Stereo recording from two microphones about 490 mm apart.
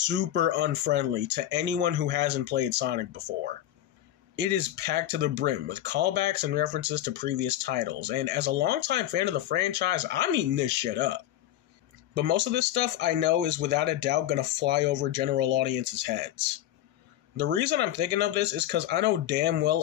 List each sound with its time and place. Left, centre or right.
0.0 s speech: right
4.4 s speech: right